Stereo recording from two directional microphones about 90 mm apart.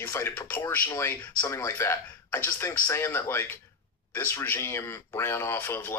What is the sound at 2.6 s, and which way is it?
Speech, 30° left (ahead or behind).